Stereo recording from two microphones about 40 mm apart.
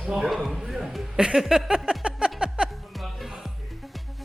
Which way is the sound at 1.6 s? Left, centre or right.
Centre.